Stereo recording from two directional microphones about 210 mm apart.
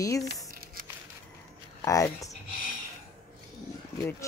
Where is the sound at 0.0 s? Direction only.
15° left (ahead or behind).